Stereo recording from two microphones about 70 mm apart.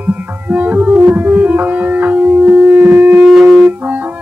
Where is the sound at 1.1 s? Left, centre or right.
Right.